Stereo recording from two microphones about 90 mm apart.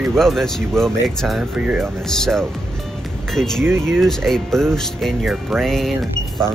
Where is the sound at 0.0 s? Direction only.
Centre (ahead or behind).